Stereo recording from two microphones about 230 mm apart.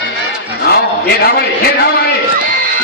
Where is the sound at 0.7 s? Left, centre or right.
Left.